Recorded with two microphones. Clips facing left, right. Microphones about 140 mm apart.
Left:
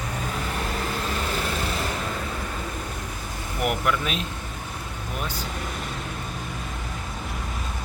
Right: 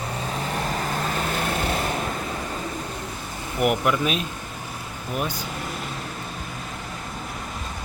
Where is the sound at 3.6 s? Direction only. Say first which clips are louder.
Right 4 dB; 15° right (ahead or behind).